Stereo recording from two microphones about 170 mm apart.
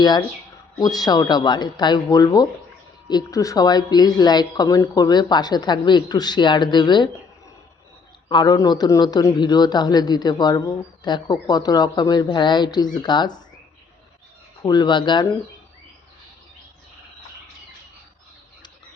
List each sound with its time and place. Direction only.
0.0 s a man's voice: 25° left (ahead or behind)
8.3 s a man's voice: 25° left (ahead or behind)
14.6 s a man's voice: 25° left (ahead or behind)